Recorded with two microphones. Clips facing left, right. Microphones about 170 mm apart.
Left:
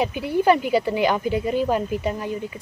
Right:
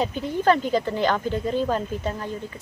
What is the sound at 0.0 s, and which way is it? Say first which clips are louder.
Speech: left 2 dB; 10° left (ahead or behind).